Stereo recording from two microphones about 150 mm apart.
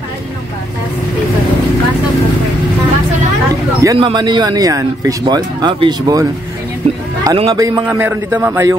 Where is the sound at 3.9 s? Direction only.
30° right (ahead or behind).